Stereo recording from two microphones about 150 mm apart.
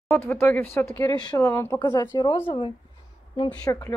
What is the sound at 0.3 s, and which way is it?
Speech, 15° left (ahead or behind).